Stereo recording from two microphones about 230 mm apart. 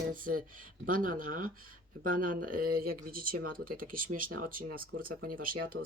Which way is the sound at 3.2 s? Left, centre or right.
Right.